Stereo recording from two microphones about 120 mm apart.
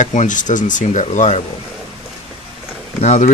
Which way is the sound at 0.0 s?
90° left.